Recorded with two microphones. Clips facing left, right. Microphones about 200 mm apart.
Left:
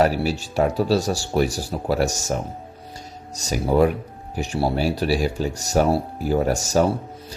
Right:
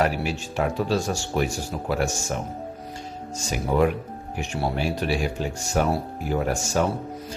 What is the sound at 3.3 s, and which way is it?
Speech, 40° left (ahead or behind).